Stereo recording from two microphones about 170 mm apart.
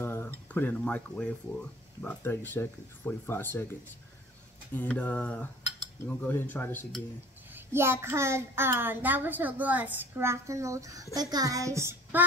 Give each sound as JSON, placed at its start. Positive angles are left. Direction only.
{"t": 0.0, "sound": "a sound", "side_deg": 15}
{"t": 2.0, "sound": "speech", "side_deg": 10}
{"t": 4.7, "sound": "speech", "side_deg": 10}
{"t": 7.5, "sound": "a woman's voice", "side_deg": -15}
{"t": 11.1, "sound": "child singing", "side_deg": -20}